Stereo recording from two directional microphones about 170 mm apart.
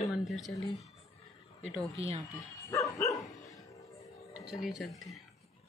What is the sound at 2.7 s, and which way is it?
Dog, 20° left (ahead or behind).